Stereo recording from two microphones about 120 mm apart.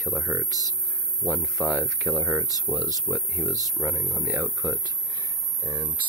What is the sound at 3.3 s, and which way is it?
Speech, 20° right (ahead or behind).